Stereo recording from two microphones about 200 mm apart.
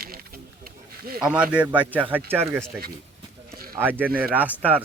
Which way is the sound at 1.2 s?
5° right (ahead or behind).